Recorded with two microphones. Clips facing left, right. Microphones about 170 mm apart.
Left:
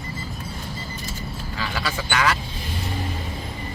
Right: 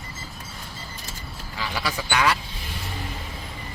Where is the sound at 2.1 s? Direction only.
10° right (ahead or behind).